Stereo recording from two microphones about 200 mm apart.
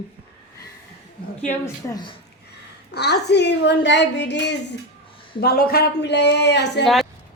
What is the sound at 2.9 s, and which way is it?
Speech, 55° left (ahead or behind).